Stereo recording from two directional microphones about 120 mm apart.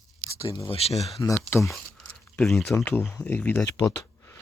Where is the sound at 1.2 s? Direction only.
25° left (ahead or behind).